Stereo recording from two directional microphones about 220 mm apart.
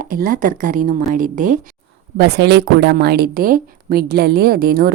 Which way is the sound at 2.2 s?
50° right (ahead or behind).